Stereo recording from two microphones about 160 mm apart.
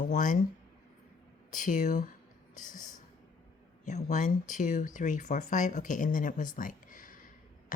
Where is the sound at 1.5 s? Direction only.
55° left (ahead or behind).